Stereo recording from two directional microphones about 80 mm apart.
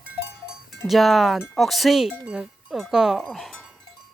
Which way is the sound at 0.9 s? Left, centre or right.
Centre.